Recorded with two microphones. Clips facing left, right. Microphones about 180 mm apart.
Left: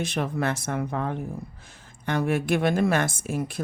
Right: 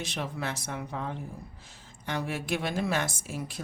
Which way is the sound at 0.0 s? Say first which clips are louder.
Left 7 dB; 50° left (ahead or behind).